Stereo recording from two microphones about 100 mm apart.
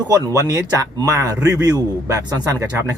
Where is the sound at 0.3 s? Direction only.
35° right (ahead or behind).